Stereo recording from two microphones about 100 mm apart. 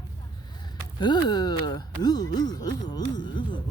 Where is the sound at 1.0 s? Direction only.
45° left (ahead or behind).